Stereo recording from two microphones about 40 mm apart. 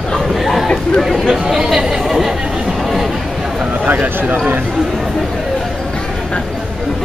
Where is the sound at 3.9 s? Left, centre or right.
Right.